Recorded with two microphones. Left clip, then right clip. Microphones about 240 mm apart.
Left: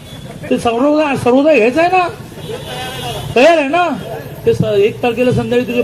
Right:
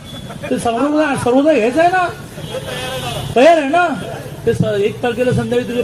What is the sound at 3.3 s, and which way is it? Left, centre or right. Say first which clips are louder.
A man's voice: left 1 dB; left.